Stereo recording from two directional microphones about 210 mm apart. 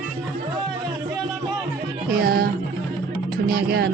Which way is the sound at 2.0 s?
45° right (ahead or behind).